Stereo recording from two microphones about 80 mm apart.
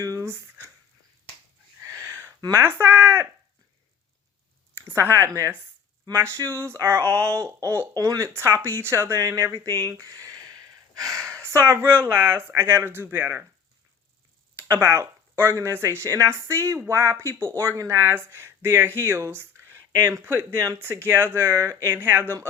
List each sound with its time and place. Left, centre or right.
0.0 s a sound: right
1.8 s a sound: right
2.5 s speech: right
4.7 s speech: right
7.9 s speech: right
14.5 s speech: right
21.9 s speech: right